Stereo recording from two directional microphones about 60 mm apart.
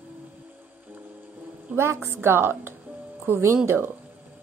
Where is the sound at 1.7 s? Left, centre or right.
Right.